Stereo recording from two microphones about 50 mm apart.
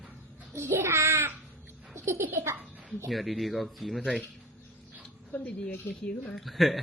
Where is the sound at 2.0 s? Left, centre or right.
Right.